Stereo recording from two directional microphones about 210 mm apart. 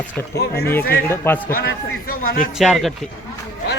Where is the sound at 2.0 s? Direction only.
45° left (ahead or behind).